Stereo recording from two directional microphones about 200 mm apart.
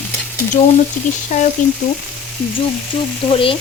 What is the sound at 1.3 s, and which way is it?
Speech, 35° left (ahead or behind).